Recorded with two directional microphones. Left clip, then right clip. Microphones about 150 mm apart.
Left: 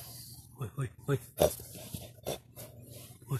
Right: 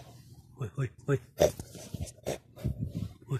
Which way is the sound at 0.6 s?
5° right (ahead or behind).